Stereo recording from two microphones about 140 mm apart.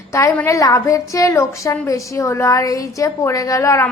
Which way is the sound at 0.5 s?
20° left (ahead or behind).